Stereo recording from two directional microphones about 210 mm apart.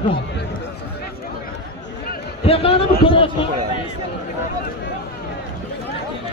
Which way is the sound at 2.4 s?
25° left (ahead or behind).